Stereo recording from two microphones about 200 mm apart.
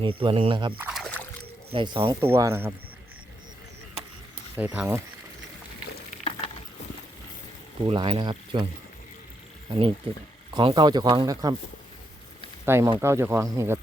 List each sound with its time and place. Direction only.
0.0 s speech: 25° right (ahead or behind)
0.8 s a sound: 5° right (ahead or behind)
1.7 s speech: 25° right (ahead or behind)
2.2 s speech: 15° right (ahead or behind)
4.5 s speech: 10° right (ahead or behind)
7.9 s speech: 25° right (ahead or behind)
9.6 s speech: 25° right (ahead or behind)
12.6 s speech: 10° right (ahead or behind)